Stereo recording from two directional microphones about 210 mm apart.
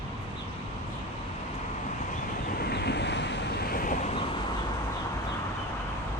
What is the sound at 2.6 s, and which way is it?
Waves, 50° left (ahead or behind).